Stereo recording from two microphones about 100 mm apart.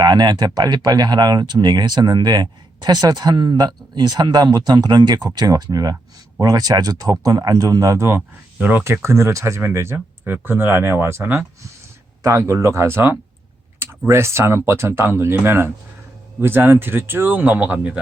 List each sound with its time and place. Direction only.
0.0 s speech: 45° right (ahead or behind); by 11.4 s 20° right (ahead or behind)
12.2 s speech: 30° right (ahead or behind); by 18.0 s 15° right (ahead or behind)